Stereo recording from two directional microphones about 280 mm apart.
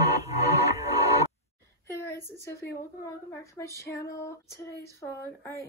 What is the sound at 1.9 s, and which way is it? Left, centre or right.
Speech, centre.